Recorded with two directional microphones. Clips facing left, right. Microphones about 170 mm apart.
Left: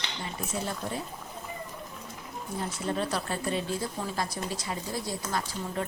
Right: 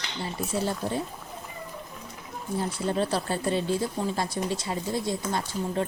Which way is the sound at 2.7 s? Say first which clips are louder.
Right 3 dB; 30° right (ahead or behind).